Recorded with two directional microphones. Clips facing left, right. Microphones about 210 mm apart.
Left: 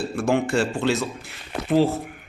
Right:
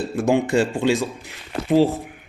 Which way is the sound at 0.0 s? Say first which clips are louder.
Right 2 dB; 20° right (ahead or behind).